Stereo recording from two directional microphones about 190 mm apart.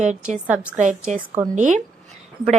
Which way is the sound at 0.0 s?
40° right (ahead or behind).